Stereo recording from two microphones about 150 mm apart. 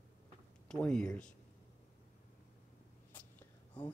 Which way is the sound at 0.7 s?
5° left (ahead or behind).